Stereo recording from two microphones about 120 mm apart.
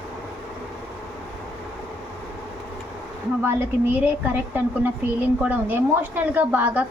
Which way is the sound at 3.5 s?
15° right (ahead or behind).